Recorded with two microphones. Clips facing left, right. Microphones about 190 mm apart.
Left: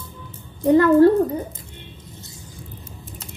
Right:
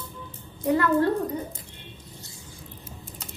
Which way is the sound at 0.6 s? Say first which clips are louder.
Left 9 dB; 30° left (ahead or behind).